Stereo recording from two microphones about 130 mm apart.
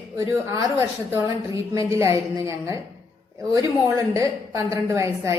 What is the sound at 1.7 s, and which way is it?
A woman's voice, 25° right (ahead or behind).